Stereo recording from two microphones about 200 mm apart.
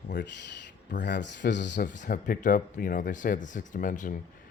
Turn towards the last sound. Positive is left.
turn(degrees=40)  # may be behind; listen again after turning